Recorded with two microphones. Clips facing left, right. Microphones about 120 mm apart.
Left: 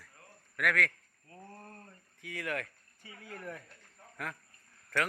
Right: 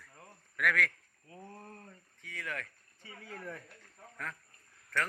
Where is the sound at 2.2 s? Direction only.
10° left (ahead or behind).